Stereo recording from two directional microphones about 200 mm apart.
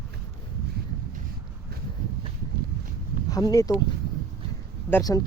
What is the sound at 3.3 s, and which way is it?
Speech, 20° left (ahead or behind).